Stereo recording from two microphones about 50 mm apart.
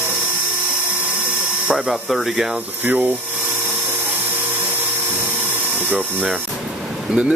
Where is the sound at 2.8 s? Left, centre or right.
Right.